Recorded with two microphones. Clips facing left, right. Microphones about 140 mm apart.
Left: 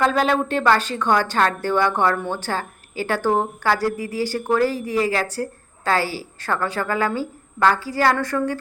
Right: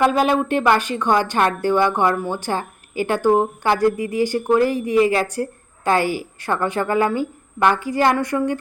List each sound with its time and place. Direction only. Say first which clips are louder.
0.0 s speech: right 2 dB; 15° right (ahead or behind)